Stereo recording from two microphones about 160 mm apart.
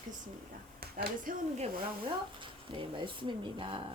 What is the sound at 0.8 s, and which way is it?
Speech, 70° right (ahead or behind).